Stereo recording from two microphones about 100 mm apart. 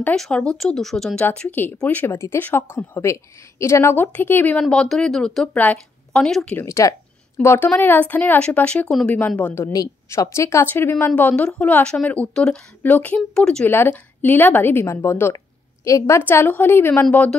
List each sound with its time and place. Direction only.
0.0 s a woman's voice: 10° left (ahead or behind)
4.6 s a woman's voice: 5° left (ahead or behind)
6.5 s speech: 30° left (ahead or behind)
7.3 s a woman's voice: 20° left (ahead or behind)
9.6 s a woman's voice: 30° left (ahead or behind); by 13.7 s 5° left (ahead or behind)
13.7 s a woman's voice: 20° left (ahead or behind)
15.3 s a sound: 30° left (ahead or behind)
16.2 s a woman's voice: 20° left (ahead or behind)